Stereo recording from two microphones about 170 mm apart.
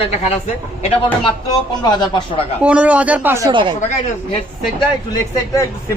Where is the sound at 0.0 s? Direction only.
40° left (ahead or behind).